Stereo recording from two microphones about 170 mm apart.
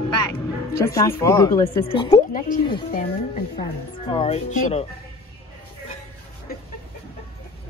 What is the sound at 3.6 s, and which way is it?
A woman's voice, 30° left (ahead or behind).